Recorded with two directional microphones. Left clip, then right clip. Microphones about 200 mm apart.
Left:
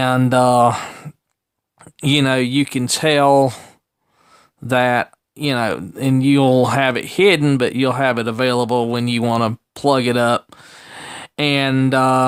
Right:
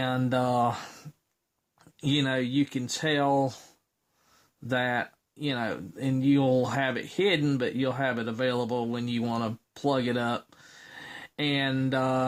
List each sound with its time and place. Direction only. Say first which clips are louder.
0.0 s speech: left 13 dB; 30° left (ahead or behind)
4.7 s speech: left 12 dB; 30° left (ahead or behind)